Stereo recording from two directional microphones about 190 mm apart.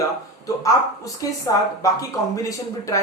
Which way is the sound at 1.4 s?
15° left (ahead or behind).